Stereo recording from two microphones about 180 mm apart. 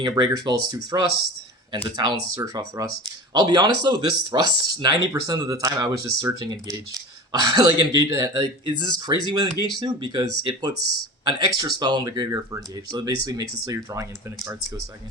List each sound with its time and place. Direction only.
0.0 s speech: 25° right (ahead or behind)